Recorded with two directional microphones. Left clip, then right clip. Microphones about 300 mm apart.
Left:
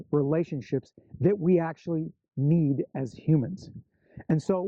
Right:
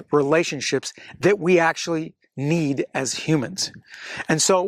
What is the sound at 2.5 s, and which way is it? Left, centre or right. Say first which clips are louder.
Speech: right 5 dB; centre.